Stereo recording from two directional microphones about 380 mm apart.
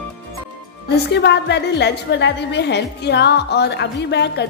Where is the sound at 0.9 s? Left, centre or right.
Left.